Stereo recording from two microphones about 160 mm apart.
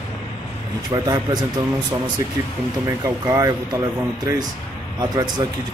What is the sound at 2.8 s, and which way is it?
Speech, 20° right (ahead or behind).